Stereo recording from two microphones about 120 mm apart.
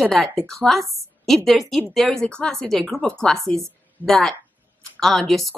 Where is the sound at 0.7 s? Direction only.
Centre (ahead or behind).